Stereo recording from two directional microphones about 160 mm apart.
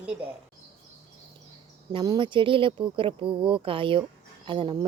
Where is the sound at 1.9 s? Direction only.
30° right (ahead or behind).